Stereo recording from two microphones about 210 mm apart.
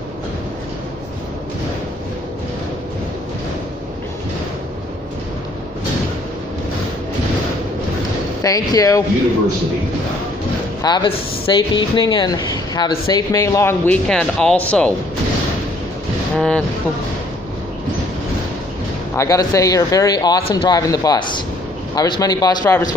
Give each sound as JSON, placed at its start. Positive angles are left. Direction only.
{"t": 8.4, "sound": "speech", "side_deg": 15}
{"t": 10.8, "sound": "speech", "side_deg": 20}
{"t": 16.3, "sound": "speech", "side_deg": 5}
{"t": 19.1, "sound": "speech", "side_deg": 15}